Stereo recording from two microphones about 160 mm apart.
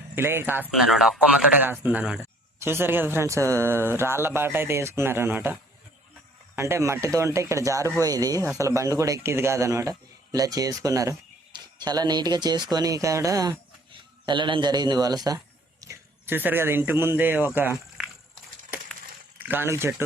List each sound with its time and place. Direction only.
0.2 s a man's voice: 15° right (ahead or behind)
0.7 s a man's voice: centre (ahead or behind)
6.6 s a man's voice: 15° right (ahead or behind)
19.4 s speech: 10° right (ahead or behind)